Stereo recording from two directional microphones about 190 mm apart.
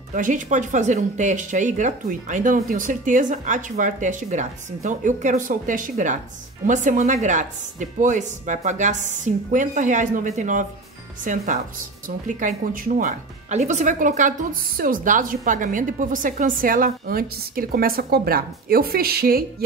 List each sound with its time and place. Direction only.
0.1 s speech: 45° right (ahead or behind)